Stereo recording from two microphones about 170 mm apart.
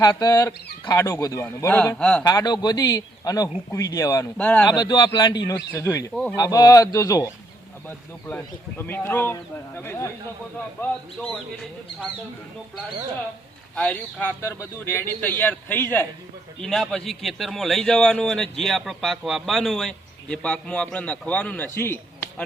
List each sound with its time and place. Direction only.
0.0 s a man's voice: 20° left (ahead or behind)
2.2 s speech: 25° left (ahead or behind)
4.4 s a man's voice: 10° left (ahead or behind)
4.7 s speech: 25° left (ahead or behind)
8.8 s a man's voice: 10° left (ahead or behind)
13.7 s a man's voice: 10° left (ahead or behind)